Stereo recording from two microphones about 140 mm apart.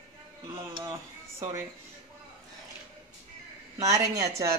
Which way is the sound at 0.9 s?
20° right (ahead or behind).